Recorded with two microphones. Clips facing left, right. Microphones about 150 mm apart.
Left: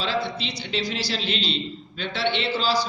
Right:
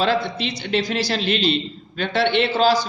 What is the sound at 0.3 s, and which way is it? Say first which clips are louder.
A man's voice: right 6 dB; 55° right (ahead or behind).